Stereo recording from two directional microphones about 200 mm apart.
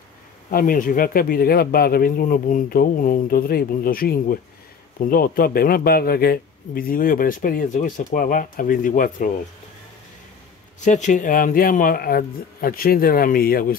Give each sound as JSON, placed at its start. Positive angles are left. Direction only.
{"t": 0.5, "sound": "a man's voice", "side_deg": 45}
{"t": 10.8, "sound": "a man's voice", "side_deg": 35}